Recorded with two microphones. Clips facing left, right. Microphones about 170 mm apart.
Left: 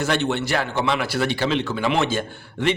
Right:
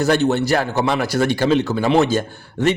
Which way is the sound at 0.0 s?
40° right (ahead or behind).